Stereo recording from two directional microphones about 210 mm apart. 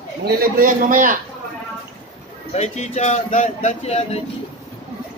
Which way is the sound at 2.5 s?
30° left (ahead or behind).